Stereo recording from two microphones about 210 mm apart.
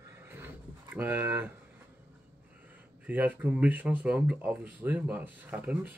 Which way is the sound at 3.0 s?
5° right (ahead or behind).